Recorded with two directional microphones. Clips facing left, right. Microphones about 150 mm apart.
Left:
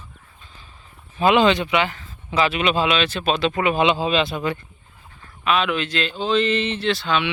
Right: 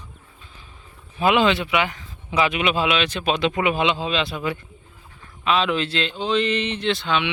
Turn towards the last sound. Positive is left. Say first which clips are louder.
# left 1 dB
turn(degrees=-20)  # may be behind; listen again after turning